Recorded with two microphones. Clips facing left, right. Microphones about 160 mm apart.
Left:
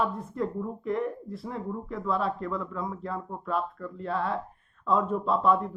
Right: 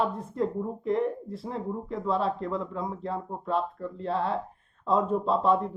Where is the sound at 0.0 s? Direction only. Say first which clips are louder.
Right 1 dB; 30° right (ahead or behind).